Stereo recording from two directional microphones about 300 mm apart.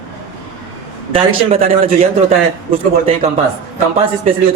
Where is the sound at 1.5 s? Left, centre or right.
Centre.